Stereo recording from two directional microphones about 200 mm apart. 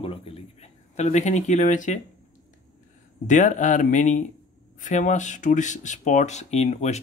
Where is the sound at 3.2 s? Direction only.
40° left (ahead or behind).